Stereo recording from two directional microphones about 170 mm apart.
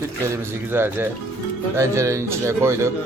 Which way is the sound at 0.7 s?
15° right (ahead or behind).